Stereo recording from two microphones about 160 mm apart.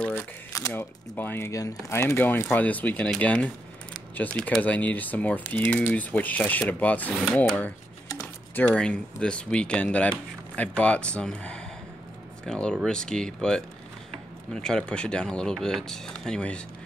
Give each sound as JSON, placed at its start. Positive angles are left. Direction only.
{"t": 0.0, "sound": "speech", "side_deg": 15}